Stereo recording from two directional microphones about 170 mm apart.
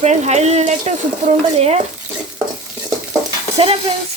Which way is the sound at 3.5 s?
35° right (ahead or behind).